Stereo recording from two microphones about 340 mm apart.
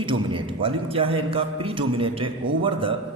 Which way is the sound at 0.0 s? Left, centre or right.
Centre.